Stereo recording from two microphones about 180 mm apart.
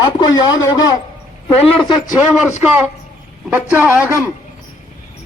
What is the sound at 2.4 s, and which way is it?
Speech, 10° right (ahead or behind).